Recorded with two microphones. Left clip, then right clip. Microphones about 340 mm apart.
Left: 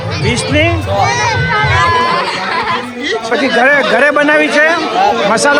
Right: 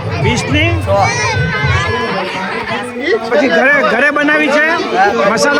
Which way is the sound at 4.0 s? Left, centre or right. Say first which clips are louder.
Left 2 dB; centre.